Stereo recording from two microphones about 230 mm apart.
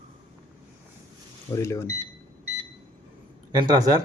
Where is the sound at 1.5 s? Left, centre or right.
Centre.